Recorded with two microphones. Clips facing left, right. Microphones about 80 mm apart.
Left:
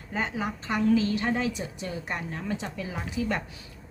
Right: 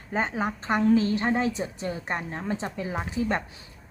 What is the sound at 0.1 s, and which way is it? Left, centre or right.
A woman's voice, right.